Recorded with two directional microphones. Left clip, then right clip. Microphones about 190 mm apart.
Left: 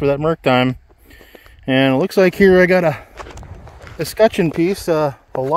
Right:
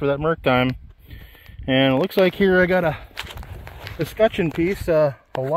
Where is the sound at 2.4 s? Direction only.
50° left (ahead or behind); by 5.5 s 35° left (ahead or behind).